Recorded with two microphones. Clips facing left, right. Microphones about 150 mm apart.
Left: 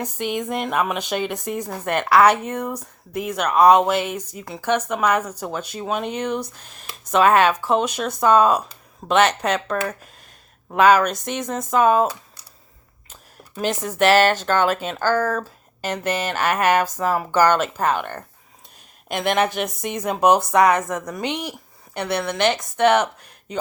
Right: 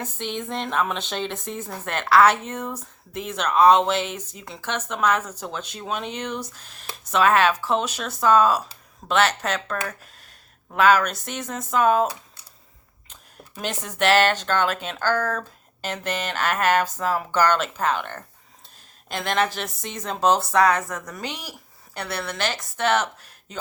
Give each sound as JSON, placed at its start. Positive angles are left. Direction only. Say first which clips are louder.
{"t": 0.0, "sound": "speech", "louder": "left 5 dB", "side_deg": 10}
{"t": 7.6, "sound": "speech", "louder": "left 4 dB", "side_deg": 10}
{"t": 10.8, "sound": "speech", "louder": "left 3 dB", "side_deg": 15}
{"t": 13.6, "sound": "speech", "louder": "left 5 dB", "side_deg": 10}